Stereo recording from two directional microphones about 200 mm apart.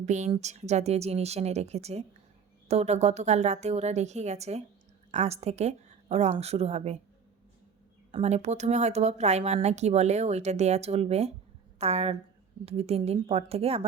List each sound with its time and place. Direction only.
0.0 s a woman's voice: 35° right (ahead or behind)
8.1 s speech: 35° right (ahead or behind)